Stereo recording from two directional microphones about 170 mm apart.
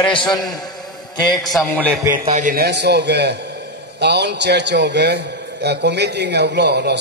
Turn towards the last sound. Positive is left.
turn(degrees=-80)